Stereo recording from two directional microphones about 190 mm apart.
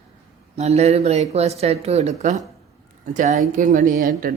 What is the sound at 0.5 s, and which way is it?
Speech, 35° right (ahead or behind).